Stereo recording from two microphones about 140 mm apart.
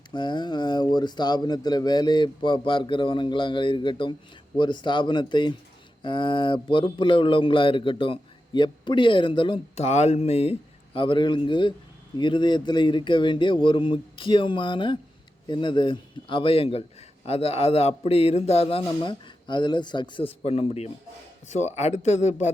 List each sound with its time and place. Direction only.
0.1 s speech: 35° left (ahead or behind)
9.7 s a man's voice: 50° left (ahead or behind)